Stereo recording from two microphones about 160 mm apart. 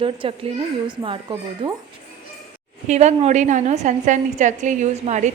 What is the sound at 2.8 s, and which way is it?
A woman's voice, 45° right (ahead or behind).